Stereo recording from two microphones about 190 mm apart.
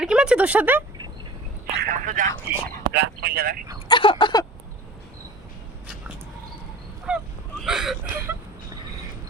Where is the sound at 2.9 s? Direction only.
60° right (ahead or behind).